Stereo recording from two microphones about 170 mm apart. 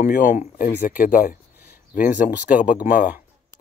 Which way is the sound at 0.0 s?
55° left (ahead or behind).